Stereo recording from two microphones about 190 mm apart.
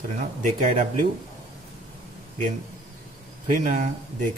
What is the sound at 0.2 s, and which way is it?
Speech, 40° right (ahead or behind).